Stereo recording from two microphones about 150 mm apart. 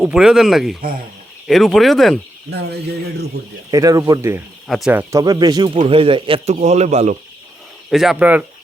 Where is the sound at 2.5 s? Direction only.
90° right.